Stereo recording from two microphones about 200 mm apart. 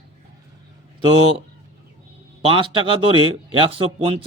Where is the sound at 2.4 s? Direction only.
25° right (ahead or behind).